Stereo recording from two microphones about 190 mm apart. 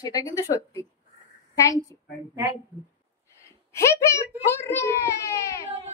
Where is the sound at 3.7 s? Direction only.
15° left (ahead or behind).